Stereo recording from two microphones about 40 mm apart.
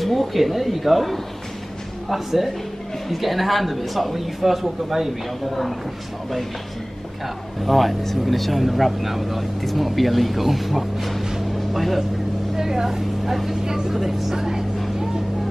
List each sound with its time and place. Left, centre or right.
0.0 s speech: centre
7.6 s speech: centre
11.5 s vehicle: centre
12.5 s speech: centre